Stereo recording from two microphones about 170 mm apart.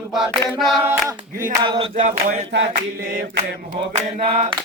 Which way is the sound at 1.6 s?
30° right (ahead or behind).